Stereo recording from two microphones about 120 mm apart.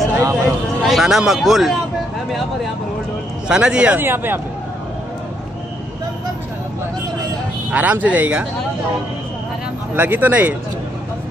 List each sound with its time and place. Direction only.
0.1 s a sound: 25° right (ahead or behind)
0.8 s speech: 5° right (ahead or behind)
3.4 s speech: 5° right (ahead or behind)
7.7 s speech: 10° right (ahead or behind)
9.9 s speech: 15° right (ahead or behind)